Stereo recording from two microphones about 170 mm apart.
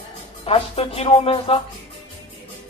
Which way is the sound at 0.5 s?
35° left (ahead or behind).